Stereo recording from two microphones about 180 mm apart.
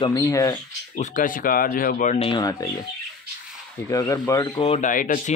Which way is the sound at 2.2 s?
25° left (ahead or behind).